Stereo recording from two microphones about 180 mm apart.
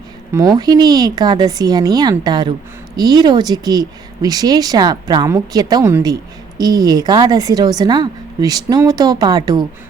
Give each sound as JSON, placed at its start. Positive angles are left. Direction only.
{"t": 0.3, "sound": "speech", "side_deg": -20}